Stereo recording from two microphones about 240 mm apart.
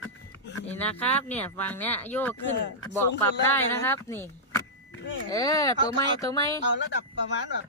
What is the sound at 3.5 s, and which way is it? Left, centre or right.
Speech, centre.